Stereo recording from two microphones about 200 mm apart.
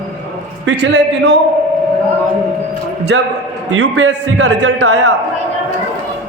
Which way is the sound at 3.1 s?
60° right (ahead or behind).